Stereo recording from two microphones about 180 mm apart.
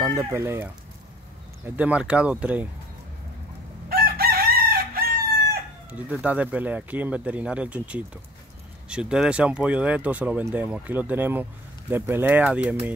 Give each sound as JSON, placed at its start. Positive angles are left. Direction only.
{"t": 0.0, "sound": "speech", "side_deg": -15}
{"t": 1.8, "sound": "speech", "side_deg": -5}
{"t": 3.9, "sound": "chicken", "side_deg": -55}
{"t": 5.9, "sound": "speech", "side_deg": -10}